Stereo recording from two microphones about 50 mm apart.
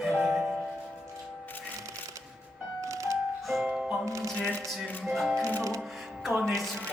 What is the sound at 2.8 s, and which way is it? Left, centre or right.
Music, right.